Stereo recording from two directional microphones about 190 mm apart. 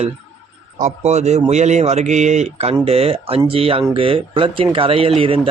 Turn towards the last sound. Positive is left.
turn(degrees=-30)  # may be behind; listen again after turning